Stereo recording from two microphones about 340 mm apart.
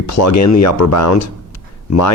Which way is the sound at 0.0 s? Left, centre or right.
Left.